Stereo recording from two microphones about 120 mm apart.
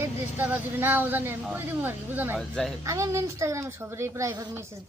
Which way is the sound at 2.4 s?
5° left (ahead or behind).